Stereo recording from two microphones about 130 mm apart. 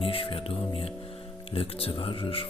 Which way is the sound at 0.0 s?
45° left (ahead or behind).